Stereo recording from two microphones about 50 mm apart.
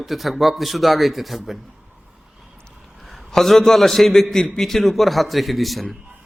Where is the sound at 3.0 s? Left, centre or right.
Centre.